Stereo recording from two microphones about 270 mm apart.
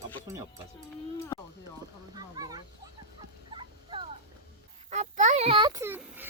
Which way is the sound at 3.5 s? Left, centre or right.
Centre.